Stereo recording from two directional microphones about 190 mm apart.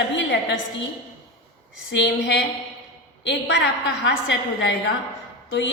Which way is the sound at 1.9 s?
65° left (ahead or behind).